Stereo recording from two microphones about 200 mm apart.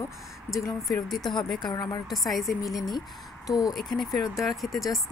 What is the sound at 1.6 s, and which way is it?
Speech, 20° left (ahead or behind).